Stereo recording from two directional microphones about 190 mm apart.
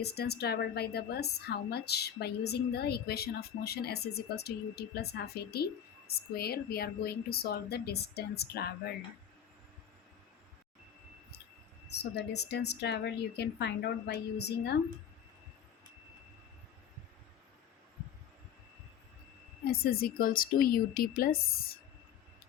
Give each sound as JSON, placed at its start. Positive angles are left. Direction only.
{"t": 0.0, "sound": "a woman's voice", "side_deg": 60}
{"t": 12.1, "sound": "a woman's voice", "side_deg": 60}
{"t": 19.6, "sound": "a woman's voice", "side_deg": 55}